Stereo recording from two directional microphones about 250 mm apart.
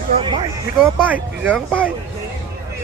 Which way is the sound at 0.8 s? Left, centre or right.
Centre.